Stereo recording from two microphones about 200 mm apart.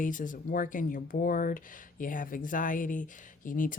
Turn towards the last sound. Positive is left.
turn(degrees=40)  # may be behind; listen again after turning